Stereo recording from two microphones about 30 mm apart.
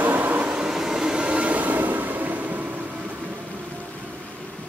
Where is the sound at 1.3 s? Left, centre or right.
Right.